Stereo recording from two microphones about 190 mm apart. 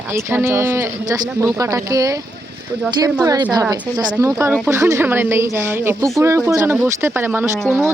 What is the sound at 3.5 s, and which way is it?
A woman's voice, 20° right (ahead or behind).